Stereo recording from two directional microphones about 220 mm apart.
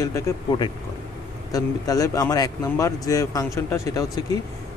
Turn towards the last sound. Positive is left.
turn(degrees=15)  # may be behind; listen again after turning